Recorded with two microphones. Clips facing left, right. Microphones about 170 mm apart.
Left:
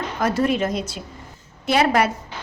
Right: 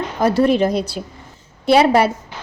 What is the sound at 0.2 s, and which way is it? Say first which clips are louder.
A woman's voice: right 6 dB; 30° right (ahead or behind).